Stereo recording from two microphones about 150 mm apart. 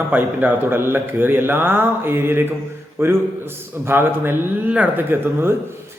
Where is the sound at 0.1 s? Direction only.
10° right (ahead or behind).